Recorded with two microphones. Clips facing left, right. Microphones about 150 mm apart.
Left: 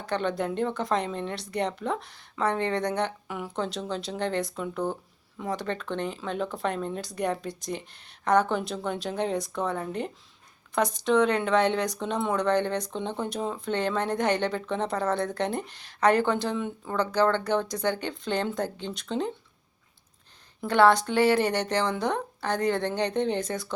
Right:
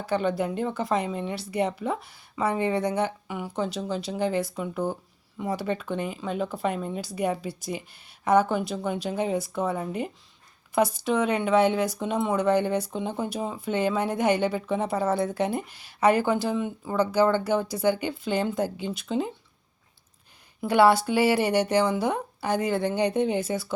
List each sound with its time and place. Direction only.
0.0 s speech: 5° right (ahead or behind)
20.6 s speech: 10° right (ahead or behind)